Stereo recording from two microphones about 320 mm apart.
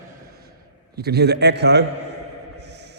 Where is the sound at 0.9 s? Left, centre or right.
Right.